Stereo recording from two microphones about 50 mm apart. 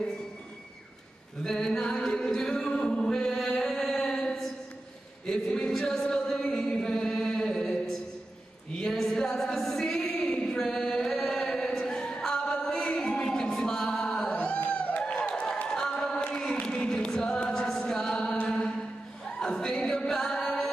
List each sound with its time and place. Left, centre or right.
1.4 s chant: centre
13.6 s music: centre
15.0 s applause: left
15.7 s a sound: centre
16.3 s a capella: left
19.2 s music: centre